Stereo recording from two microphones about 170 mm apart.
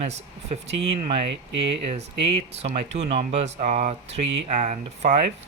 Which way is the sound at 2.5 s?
35° right (ahead or behind).